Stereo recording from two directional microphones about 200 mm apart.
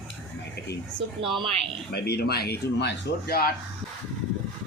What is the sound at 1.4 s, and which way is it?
Speech, 30° right (ahead or behind).